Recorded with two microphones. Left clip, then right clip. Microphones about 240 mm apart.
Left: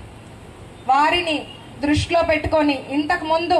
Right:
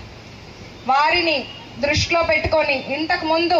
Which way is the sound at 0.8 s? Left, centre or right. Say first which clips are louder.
Even; left.